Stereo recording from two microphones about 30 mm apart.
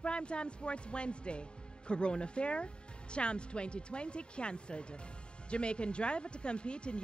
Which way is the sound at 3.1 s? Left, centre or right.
Left.